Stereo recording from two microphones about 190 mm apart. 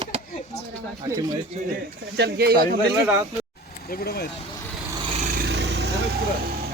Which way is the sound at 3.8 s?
50° left (ahead or behind).